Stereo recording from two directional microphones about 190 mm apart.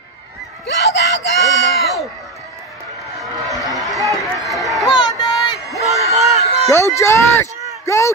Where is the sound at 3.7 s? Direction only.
Centre (ahead or behind).